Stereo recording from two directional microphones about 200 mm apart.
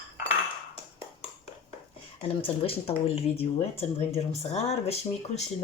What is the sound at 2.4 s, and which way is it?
Speech, 30° left (ahead or behind).